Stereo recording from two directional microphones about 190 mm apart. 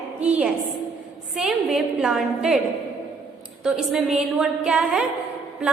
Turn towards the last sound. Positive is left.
turn(degrees=-5)  # may be behind; listen again after turning